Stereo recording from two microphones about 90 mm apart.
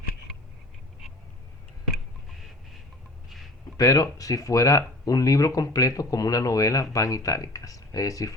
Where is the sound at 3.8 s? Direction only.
40° left (ahead or behind).